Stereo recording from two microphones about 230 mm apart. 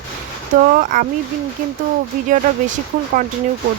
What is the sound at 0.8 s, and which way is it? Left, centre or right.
Speech, right.